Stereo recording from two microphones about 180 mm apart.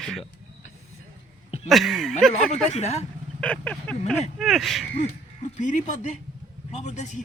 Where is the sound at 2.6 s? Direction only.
40° left (ahead or behind).